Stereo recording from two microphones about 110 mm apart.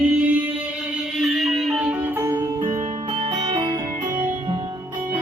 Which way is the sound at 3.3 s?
45° right (ahead or behind).